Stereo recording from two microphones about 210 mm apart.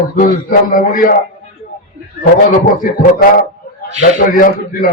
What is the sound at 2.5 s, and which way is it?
Speech, 40° left (ahead or behind).